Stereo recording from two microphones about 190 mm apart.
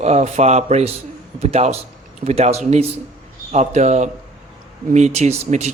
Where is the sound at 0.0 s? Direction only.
35° right (ahead or behind).